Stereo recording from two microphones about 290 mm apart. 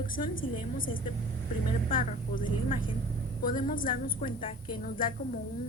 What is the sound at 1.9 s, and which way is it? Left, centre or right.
Speech, left.